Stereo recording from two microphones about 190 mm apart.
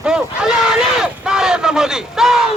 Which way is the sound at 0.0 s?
5° right (ahead or behind).